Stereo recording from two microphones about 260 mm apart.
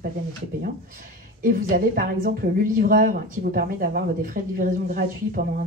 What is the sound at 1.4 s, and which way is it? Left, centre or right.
A woman's voice, right.